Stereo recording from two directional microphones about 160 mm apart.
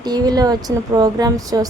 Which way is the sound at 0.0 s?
25° right (ahead or behind).